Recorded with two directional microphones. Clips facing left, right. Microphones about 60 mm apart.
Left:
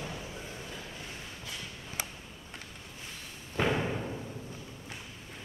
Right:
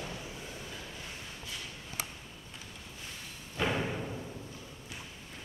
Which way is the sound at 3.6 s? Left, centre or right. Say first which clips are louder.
Left 2 dB; centre.